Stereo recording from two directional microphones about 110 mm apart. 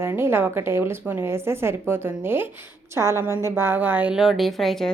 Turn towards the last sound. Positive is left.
turn(degrees=0)  # may be behind; listen again after turning